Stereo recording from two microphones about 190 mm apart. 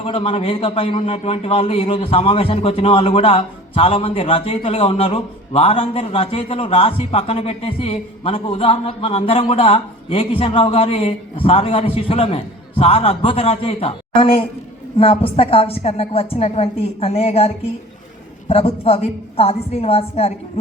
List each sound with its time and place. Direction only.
0.0 s a man's voice: 30° left (ahead or behind)